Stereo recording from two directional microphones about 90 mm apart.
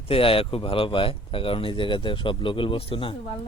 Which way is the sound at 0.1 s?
90° left.